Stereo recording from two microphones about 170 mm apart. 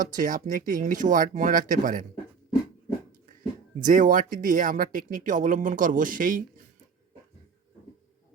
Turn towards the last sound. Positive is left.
turn(degrees=-50)  # may be behind; listen again after turning